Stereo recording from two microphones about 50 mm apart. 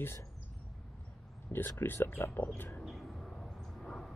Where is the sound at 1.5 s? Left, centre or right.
Left.